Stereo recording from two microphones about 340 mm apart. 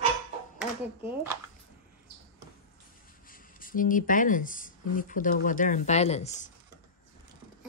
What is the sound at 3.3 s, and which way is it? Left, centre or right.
Speech, left.